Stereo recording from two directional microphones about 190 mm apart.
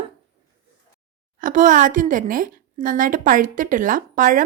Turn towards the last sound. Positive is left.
turn(degrees=-45)  # may be behind; listen again after turning